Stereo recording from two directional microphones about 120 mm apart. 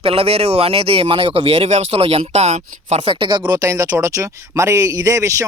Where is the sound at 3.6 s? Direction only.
30° right (ahead or behind).